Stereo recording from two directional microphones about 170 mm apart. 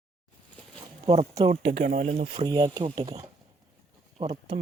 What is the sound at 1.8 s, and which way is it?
Speech, 50° right (ahead or behind).